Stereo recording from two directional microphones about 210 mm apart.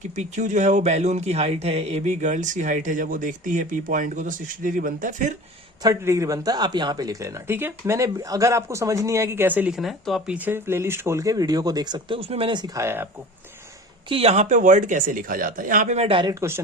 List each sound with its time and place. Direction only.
0.2 s speech: 35° right (ahead or behind)
5.8 s speech: 15° right (ahead or behind)
14.1 s speech: 30° right (ahead or behind)